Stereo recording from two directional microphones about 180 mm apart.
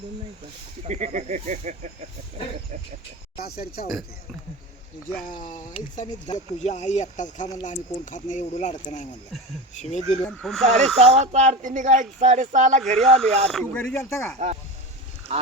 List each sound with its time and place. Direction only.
0.9 s speech: 40° right (ahead or behind)
3.4 s speech: 55° left (ahead or behind)
5.4 s speech: 45° left (ahead or behind)
9.7 s speech: 40° left (ahead or behind)
10.2 s speech: centre (ahead or behind)
10.8 s speech: 40° right (ahead or behind)
13.0 s speech: 5° left (ahead or behind)
14.3 s speech: 40° right (ahead or behind)